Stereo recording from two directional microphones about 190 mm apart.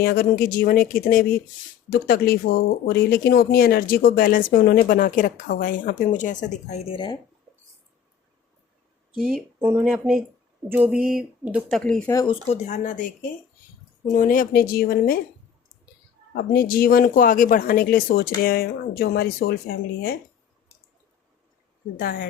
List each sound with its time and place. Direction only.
0.0 s speech: 55° left (ahead or behind); by 7.2 s 25° left (ahead or behind)
9.1 s speech: 5° right (ahead or behind)
11.8 s speech: 5° left (ahead or behind)
12.1 s speech: 20° left (ahead or behind)
12.5 s speech: 40° left (ahead or behind)
14.1 s speech: 45° left (ahead or behind)
16.3 s speech: 55° left (ahead or behind)
21.9 s speech: 50° left (ahead or behind)